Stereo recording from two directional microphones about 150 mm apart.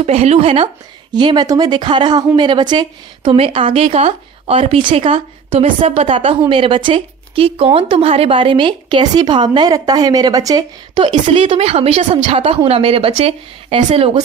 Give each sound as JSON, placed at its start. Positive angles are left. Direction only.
{"t": 0.0, "sound": "speech", "side_deg": -45}
{"t": 1.1, "sound": "speech", "side_deg": -30}
{"t": 11.2, "sound": "speech", "side_deg": -35}